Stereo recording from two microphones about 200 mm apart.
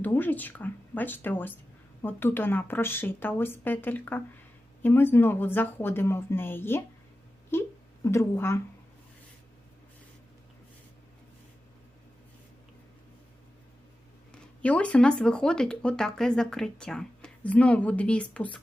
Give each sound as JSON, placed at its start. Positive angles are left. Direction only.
{"t": 0.0, "sound": "speech", "side_deg": 10}
{"t": 14.6, "sound": "speech", "side_deg": 5}